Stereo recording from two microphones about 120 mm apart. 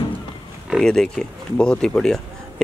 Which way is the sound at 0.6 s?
5° left (ahead or behind).